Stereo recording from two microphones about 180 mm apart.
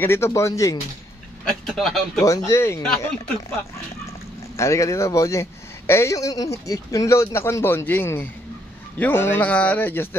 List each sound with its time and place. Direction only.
0.0 s a man's voice: 15° left (ahead or behind)
1.7 s speech: centre (ahead or behind)
2.1 s a man's voice: 15° left (ahead or behind)
4.6 s a man's voice: 15° left (ahead or behind)